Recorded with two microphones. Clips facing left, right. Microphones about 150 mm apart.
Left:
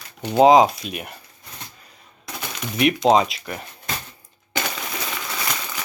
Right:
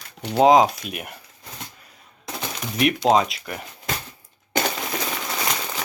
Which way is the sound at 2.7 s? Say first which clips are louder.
Left 2 dB; centre (ahead or behind).